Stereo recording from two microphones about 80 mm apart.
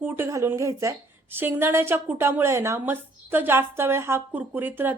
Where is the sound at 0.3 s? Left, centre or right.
Right.